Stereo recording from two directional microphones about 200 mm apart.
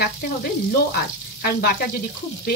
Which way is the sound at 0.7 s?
50° left (ahead or behind).